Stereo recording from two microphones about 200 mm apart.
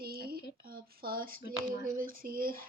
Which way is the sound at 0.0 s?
50° right (ahead or behind).